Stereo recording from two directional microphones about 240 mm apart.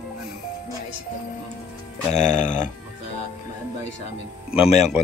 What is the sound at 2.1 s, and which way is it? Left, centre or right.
Speech, left.